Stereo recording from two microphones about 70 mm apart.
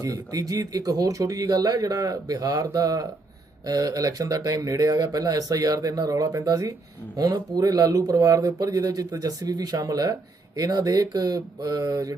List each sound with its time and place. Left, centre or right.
0.0 s speech: right